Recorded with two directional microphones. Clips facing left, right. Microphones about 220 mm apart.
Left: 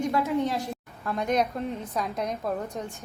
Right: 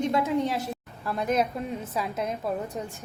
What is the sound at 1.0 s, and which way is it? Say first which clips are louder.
A woman's voice: even; 5° right (ahead or behind).